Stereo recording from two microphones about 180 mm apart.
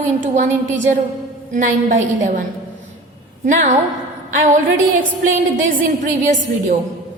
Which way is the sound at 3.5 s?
45° right (ahead or behind).